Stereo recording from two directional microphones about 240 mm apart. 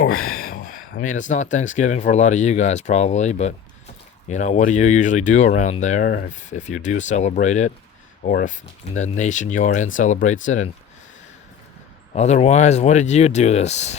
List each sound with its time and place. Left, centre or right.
0.1 s speech: left
0.3 s speech: left
12.1 s speech: left